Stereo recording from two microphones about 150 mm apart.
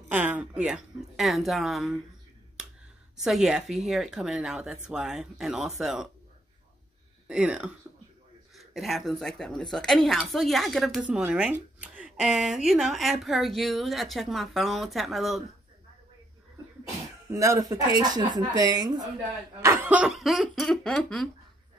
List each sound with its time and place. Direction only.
0.1 s speech: 10° right (ahead or behind)
2.6 s a sound: 5° right (ahead or behind)
3.2 s speech: centre (ahead or behind)
7.2 s speech: 5° right (ahead or behind)
17.3 s speech: 20° right (ahead or behind)
19.6 s speech: 15° right (ahead or behind); by 21.3 s 5° left (ahead or behind)